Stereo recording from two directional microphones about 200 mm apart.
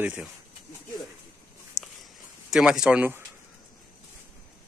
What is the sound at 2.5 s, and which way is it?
Speech, 5° right (ahead or behind).